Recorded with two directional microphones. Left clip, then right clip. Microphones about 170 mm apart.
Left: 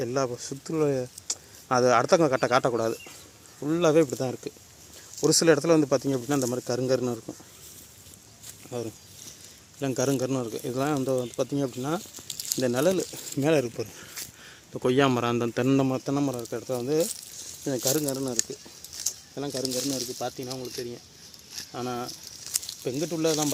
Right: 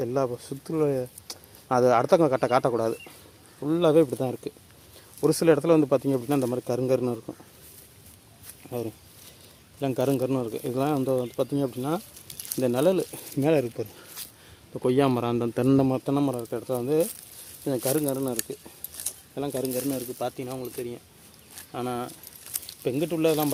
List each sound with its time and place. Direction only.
0.0 s speech: 5° right (ahead or behind)
0.7 s speech: 10° left (ahead or behind)
8.7 s a man's voice: 5° right (ahead or behind)
15.5 s speech: 20° right (ahead or behind)
15.9 s a man's voice: 10° right (ahead or behind)
16.3 s speech: centre (ahead or behind)
19.0 s keys jangling: 5° right (ahead or behind)
19.6 s speech: centre (ahead or behind)
22.8 s speech: 20° right (ahead or behind)